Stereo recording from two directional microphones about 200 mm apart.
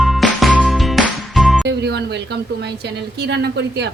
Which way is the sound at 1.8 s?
55° right (ahead or behind).